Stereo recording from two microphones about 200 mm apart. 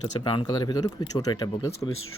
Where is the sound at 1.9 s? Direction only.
90° left.